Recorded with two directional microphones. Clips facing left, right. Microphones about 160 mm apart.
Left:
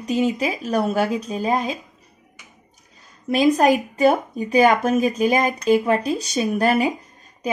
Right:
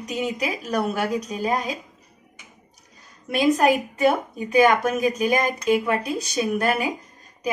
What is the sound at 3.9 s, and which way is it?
A woman's voice, 35° left (ahead or behind).